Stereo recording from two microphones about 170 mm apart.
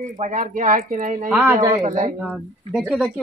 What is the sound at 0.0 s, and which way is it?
A man's voice, 50° right (ahead or behind).